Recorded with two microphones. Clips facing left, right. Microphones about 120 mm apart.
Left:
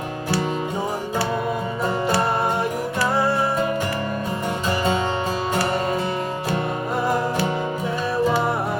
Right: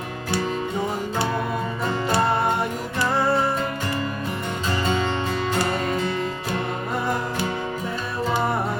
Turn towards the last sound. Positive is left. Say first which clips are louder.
# left 3 dB
turn(degrees=0)  # may be behind; listen again after turning